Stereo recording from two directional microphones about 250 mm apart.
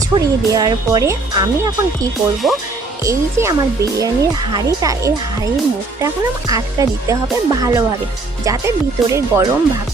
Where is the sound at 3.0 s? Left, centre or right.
Centre.